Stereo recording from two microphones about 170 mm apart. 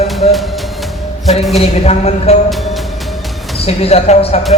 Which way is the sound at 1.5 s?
40° left (ahead or behind).